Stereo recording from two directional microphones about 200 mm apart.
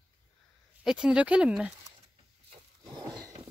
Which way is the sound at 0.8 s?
5° right (ahead or behind).